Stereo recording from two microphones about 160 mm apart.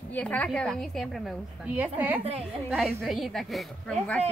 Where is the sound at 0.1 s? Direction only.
10° left (ahead or behind).